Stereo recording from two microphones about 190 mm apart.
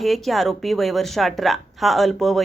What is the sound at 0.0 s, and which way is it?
A woman's voice, centre (ahead or behind).